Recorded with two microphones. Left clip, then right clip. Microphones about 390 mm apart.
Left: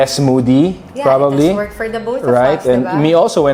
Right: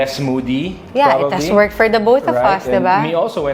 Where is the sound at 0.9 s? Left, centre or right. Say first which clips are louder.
Right 1 dB; right.